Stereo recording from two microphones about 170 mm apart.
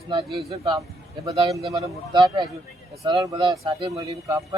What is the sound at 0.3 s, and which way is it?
A man's voice, 30° right (ahead or behind).